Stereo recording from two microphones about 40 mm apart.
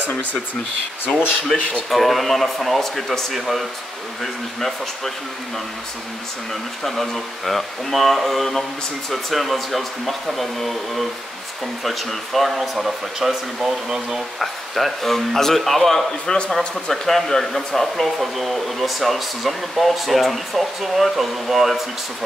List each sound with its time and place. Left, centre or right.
0.1 s speech: left
1.9 s speech: centre
6.8 s speech: centre
14.4 s speech: centre